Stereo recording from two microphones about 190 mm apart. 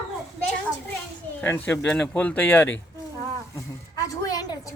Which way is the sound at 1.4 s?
10° left (ahead or behind).